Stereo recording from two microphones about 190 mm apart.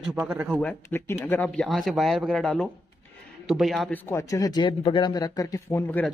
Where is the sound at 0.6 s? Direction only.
10° left (ahead or behind).